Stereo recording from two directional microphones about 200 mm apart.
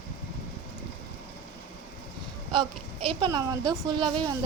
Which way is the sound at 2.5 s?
25° right (ahead or behind).